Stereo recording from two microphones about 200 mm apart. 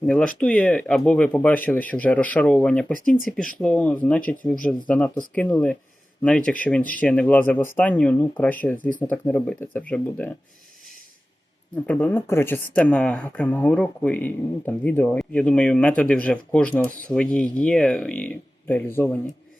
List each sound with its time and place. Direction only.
0.0 s speech: 5° left (ahead or behind)
3.0 s speech: 40° left (ahead or behind)
3.2 s speech: 5° left (ahead or behind)
11.9 s speech: 5° left (ahead or behind)